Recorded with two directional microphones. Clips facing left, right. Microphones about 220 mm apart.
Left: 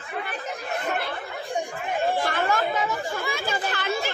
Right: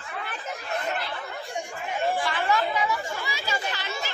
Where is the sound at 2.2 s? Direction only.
45° left (ahead or behind).